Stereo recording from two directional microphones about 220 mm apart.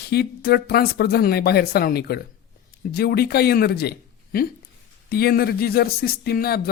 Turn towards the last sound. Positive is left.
turn(degrees=45)  # may be behind; listen again after turning